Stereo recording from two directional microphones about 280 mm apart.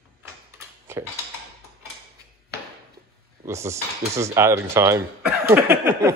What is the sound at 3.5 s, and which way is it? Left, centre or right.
Speech, centre.